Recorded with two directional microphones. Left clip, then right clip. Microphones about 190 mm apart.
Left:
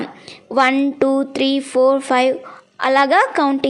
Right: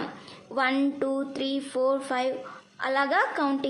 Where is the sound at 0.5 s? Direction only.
40° left (ahead or behind).